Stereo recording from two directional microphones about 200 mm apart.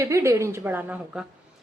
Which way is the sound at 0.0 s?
15° right (ahead or behind).